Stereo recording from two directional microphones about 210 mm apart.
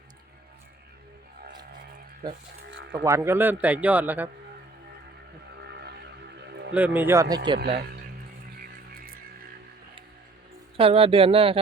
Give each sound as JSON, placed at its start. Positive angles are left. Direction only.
{"t": 2.9, "sound": "a man's voice", "side_deg": -15}
{"t": 5.6, "sound": "vehicle", "side_deg": -50}
{"t": 6.7, "sound": "a man's voice", "side_deg": -10}
{"t": 10.8, "sound": "speech", "side_deg": -25}